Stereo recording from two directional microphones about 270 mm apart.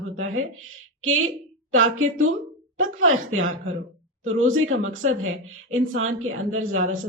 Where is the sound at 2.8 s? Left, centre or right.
Right.